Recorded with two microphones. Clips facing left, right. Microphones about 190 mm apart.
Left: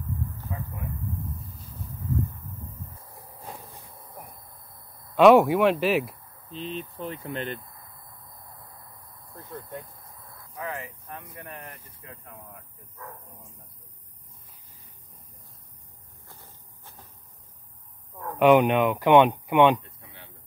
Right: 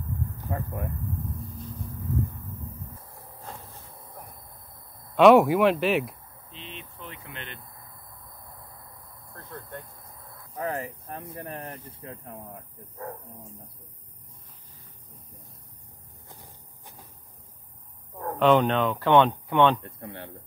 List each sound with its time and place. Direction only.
0.5 s speech: 55° right (ahead or behind)
3.1 s train: 15° left (ahead or behind)
5.1 s speech: centre (ahead or behind)
6.6 s speech: 40° left (ahead or behind)
9.3 s speech: 5° left (ahead or behind)
10.5 s speech: 35° right (ahead or behind)
16.3 s vehicle: 15° right (ahead or behind)
18.4 s speech: 10° left (ahead or behind)
19.8 s speech: 60° right (ahead or behind)